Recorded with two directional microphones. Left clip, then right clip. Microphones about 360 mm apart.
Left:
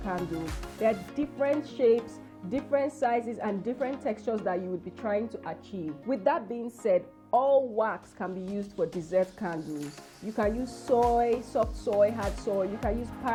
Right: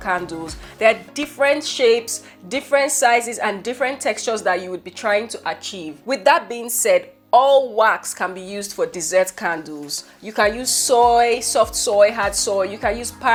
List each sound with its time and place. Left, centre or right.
0.1 s a woman's voice: centre
10.9 s speech: centre
11.2 s a woman's voice: centre